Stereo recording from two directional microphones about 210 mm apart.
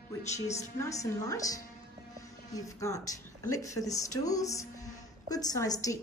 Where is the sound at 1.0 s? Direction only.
15° left (ahead or behind).